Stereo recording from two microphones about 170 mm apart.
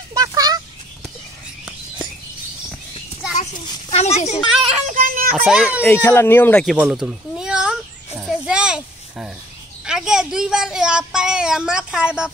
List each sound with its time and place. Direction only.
0.1 s a sound: 20° right (ahead or behind)
3.9 s a child's voice: 40° left (ahead or behind)
4.7 s child singing: 45° right (ahead or behind)
5.3 s speech: 5° right (ahead or behind)
5.9 s speech: 10° left (ahead or behind)
6.6 s a sound: 5° right (ahead or behind)
9.8 s speech: 5° right (ahead or behind)